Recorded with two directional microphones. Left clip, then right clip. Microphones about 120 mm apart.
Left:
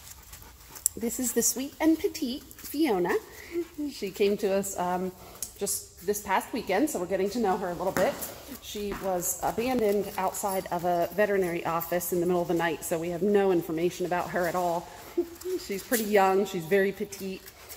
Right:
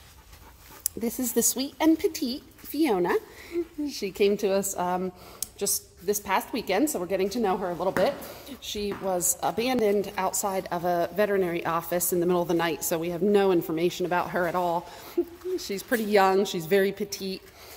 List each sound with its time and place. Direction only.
1.3 s a woman's voice: 25° right (ahead or behind); by 7.5 s 10° right (ahead or behind)
7.5 s a woman's voice: 25° right (ahead or behind)